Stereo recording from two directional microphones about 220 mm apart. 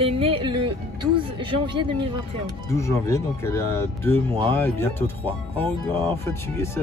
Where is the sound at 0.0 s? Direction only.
25° right (ahead or behind).